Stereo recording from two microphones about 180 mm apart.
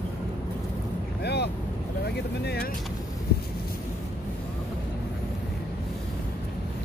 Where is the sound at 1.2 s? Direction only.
65° left (ahead or behind).